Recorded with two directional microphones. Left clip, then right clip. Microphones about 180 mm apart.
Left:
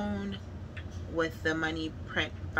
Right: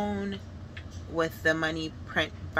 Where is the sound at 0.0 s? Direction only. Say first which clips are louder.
Right 5 dB; 50° right (ahead or behind).